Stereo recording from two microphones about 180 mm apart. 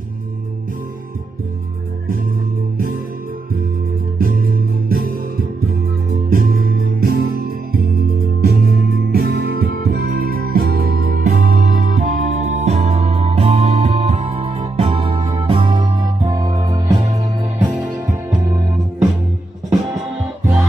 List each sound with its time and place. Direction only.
4.2 s music: 55° right (ahead or behind)
6.3 s music: 55° right (ahead or behind); by 17.5 s 20° right (ahead or behind)
17.6 s music: 10° right (ahead or behind)